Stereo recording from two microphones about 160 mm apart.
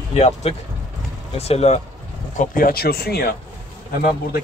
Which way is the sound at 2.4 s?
65° left (ahead or behind).